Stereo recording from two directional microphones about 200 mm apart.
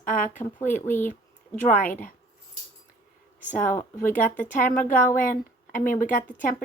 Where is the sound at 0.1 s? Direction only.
40° left (ahead or behind).